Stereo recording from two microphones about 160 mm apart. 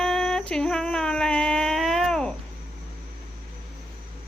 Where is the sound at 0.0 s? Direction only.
5° left (ahead or behind).